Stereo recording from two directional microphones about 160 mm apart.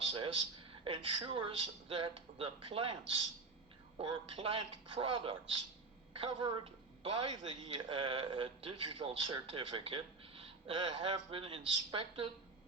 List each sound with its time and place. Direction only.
0.1 s a man's voice: 35° right (ahead or behind)